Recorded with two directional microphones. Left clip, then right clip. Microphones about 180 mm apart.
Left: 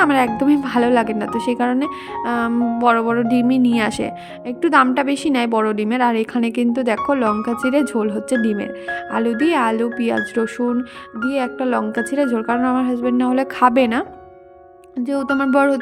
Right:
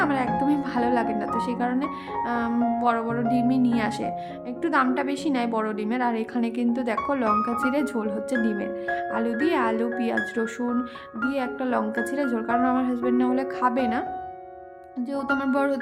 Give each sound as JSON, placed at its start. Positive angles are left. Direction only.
{"t": 0.0, "sound": "speech", "side_deg": 45}